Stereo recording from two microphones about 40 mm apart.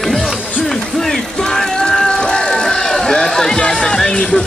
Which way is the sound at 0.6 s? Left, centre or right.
Centre.